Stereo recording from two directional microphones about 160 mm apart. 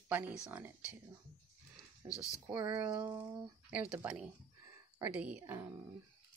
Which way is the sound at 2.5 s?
25° right (ahead or behind).